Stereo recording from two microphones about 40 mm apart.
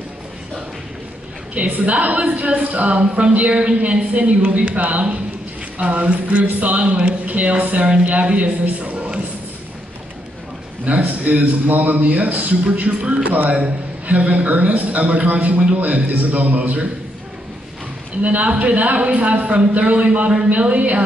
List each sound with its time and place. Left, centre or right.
1.5 s a woman's voice: right
6.4 s speech: right
6.8 s a woman's voice: right
8.6 s speech: right
8.9 s a sound: right
10.9 s a woman's voice: right
18.2 s a woman's voice: right